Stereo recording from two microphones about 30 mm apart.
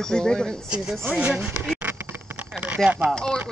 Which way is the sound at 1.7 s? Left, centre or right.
Right.